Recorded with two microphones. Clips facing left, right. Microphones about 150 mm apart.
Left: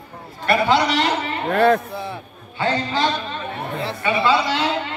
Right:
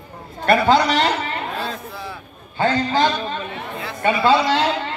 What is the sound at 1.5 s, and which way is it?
Speech, 60° left (ahead or behind).